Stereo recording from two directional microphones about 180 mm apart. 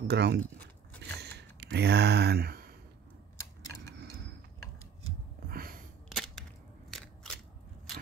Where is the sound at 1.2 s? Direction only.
70° right (ahead or behind).